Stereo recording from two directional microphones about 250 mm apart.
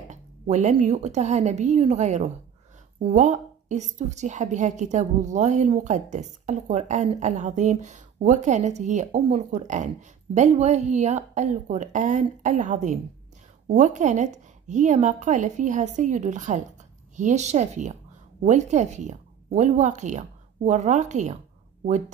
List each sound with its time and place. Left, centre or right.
0.1 s a woman's voice: right